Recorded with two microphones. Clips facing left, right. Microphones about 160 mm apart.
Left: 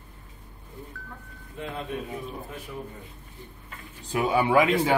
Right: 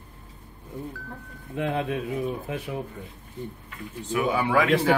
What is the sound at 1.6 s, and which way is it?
Speech, 75° right (ahead or behind).